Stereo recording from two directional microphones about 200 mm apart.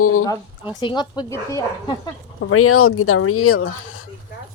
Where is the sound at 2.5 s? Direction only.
90° left.